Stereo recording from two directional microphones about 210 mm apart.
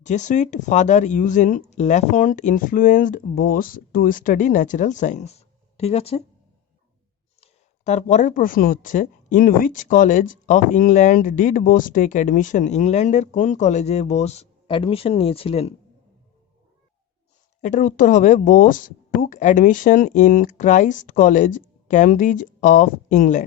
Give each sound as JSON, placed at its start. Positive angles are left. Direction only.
{"t": 0.0, "sound": "speech", "side_deg": 35}
{"t": 7.4, "sound": "speech", "side_deg": 35}
{"t": 17.6, "sound": "speech", "side_deg": 40}